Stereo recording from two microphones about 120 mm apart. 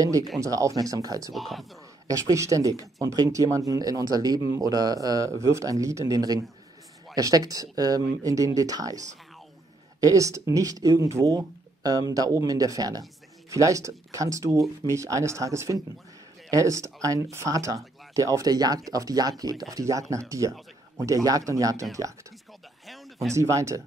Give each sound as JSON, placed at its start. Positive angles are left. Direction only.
{"t": 0.4, "sound": "speech", "side_deg": -25}
{"t": 1.3, "sound": "speech", "side_deg": 0}
{"t": 2.0, "sound": "speech", "side_deg": -30}
{"t": 9.9, "sound": "speech", "side_deg": -30}
{"t": 23.3, "sound": "speech", "side_deg": -25}